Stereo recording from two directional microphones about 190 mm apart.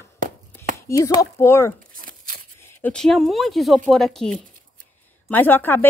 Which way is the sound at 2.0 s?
50° right (ahead or behind).